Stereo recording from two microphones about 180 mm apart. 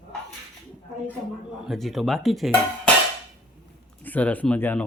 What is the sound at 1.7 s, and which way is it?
Dishes, centre (ahead or behind).